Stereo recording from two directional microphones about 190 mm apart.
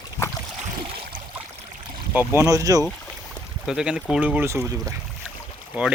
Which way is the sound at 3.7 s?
5° right (ahead or behind).